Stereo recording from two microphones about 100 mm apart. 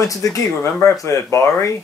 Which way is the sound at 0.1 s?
35° left (ahead or behind).